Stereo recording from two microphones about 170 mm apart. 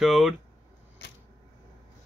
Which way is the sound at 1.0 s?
90° left.